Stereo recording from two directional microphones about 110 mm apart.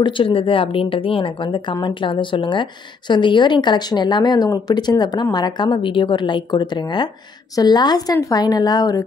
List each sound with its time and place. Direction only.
0.0 s a woman's voice: 50° left (ahead or behind); by 9.0 s 35° left (ahead or behind)